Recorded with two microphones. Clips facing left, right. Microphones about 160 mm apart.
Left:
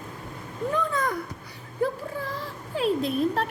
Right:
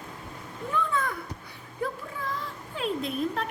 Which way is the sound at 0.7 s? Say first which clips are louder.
Left 1 dB; 40° left (ahead or behind).